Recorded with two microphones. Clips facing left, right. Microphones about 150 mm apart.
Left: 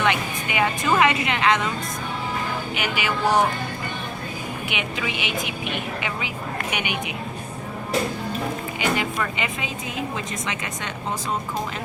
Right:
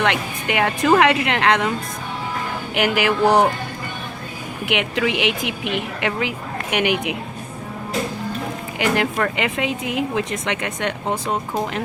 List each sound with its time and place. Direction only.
0.0 s speech: 70° right (ahead or behind)
2.7 s speech: 80° right
4.6 s a woman's voice: 75° right (ahead or behind)
8.8 s speech: 70° right (ahead or behind)